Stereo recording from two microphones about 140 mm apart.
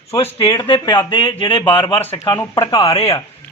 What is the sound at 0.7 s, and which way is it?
A man's voice, 35° left (ahead or behind).